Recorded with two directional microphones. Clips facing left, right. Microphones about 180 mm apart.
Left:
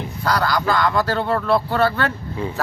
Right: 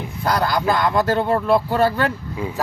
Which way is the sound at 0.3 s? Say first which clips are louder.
Right 1 dB; 20° right (ahead or behind).